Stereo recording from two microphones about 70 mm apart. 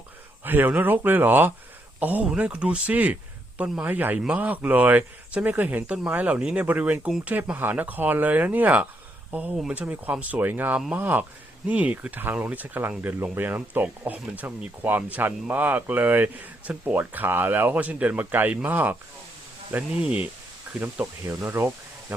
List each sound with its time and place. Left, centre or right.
0.4 s speech: right
20.8 s speech: right